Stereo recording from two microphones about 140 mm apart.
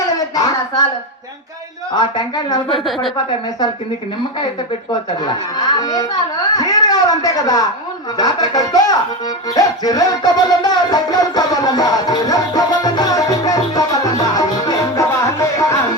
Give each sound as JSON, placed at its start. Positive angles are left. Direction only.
{"t": 0.3, "sound": "a sound", "side_deg": 25}
{"t": 1.9, "sound": "a woman's voice", "side_deg": 30}
{"t": 2.6, "sound": "a woman's voice", "side_deg": 0}
{"t": 4.9, "sound": "speech", "side_deg": 30}
{"t": 9.6, "sound": "music", "side_deg": 25}